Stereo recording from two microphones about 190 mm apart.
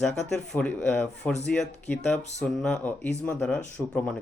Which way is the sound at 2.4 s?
5° left (ahead or behind).